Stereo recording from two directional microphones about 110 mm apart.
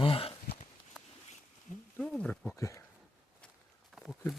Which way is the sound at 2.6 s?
25° left (ahead or behind).